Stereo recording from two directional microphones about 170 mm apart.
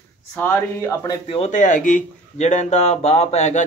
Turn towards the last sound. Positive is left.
turn(degrees=40)  # may be behind; listen again after turning